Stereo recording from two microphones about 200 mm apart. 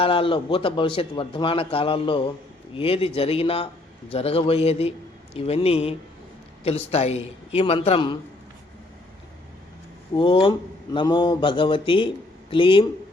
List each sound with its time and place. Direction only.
0.0 s a man's voice: 25° left (ahead or behind)
10.2 s speech: 25° left (ahead or behind)